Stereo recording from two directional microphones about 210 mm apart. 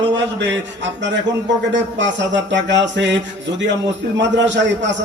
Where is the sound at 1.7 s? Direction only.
60° right (ahead or behind).